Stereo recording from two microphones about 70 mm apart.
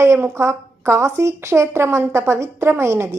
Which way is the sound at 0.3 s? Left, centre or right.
Right.